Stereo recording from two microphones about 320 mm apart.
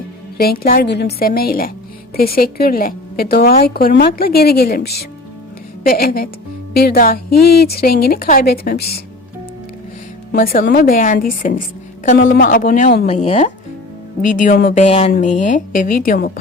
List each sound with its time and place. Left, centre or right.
0.3 s a woman's voice: left
10.3 s a woman's voice: left